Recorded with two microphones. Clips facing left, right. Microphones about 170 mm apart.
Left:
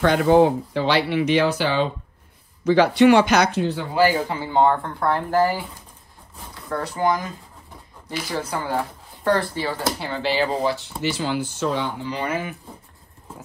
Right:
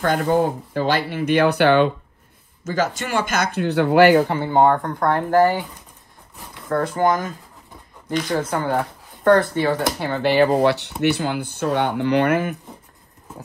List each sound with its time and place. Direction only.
0.7 s speech: 50° right (ahead or behind)
2.6 s speech: 45° right (ahead or behind)
6.7 s speech: 50° right (ahead or behind)
8.1 s a woman's voice: 5° left (ahead or behind)
8.4 s speech: 50° right (ahead or behind)